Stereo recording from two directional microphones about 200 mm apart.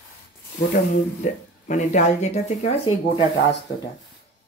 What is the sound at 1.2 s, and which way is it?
Speech, 35° left (ahead or behind).